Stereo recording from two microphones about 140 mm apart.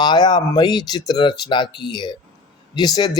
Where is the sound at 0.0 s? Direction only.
30° left (ahead or behind).